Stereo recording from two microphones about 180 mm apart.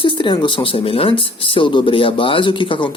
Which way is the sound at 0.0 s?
30° left (ahead or behind).